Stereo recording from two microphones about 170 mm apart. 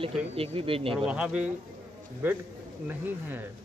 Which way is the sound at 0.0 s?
35° right (ahead or behind).